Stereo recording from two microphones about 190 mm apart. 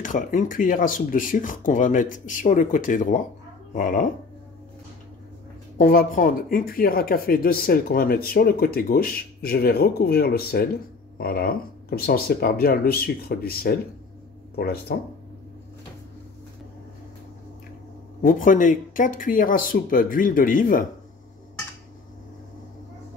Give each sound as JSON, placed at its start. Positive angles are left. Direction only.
{"t": 0.0, "sound": "speech", "side_deg": 45}
{"t": 5.8, "sound": "speech", "side_deg": 50}
{"t": 18.2, "sound": "speech", "side_deg": 45}